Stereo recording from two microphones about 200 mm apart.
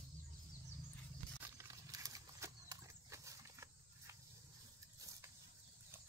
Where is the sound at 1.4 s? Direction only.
15° right (ahead or behind).